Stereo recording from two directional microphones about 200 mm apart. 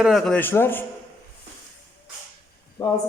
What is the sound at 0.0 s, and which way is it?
Speech, centre (ahead or behind).